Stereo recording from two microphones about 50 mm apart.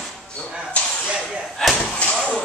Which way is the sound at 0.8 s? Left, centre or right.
Left.